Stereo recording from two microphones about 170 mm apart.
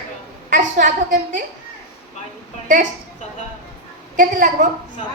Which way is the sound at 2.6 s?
50° right (ahead or behind).